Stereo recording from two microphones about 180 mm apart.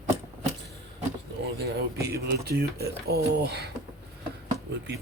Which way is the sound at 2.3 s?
65° right (ahead or behind).